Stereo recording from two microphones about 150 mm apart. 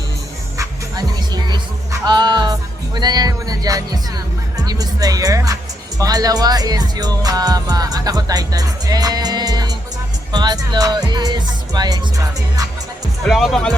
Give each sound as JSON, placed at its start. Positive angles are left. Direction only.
{"t": 0.6, "sound": "music", "side_deg": -25}
{"t": 4.6, "sound": "speech", "side_deg": -25}
{"t": 13.2, "sound": "speech", "side_deg": 0}